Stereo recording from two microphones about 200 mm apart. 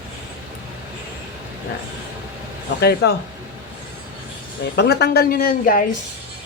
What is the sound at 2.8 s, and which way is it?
Speech, 55° left (ahead or behind).